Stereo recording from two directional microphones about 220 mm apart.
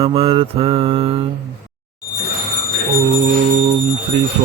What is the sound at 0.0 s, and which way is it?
Mantra, 25° right (ahead or behind).